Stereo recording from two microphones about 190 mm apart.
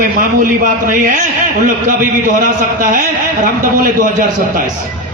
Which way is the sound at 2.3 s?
45° right (ahead or behind).